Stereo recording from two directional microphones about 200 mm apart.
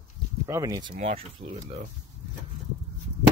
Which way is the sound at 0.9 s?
40° right (ahead or behind).